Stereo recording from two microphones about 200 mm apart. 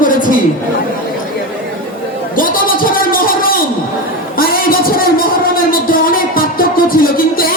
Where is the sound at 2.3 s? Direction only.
45° left (ahead or behind).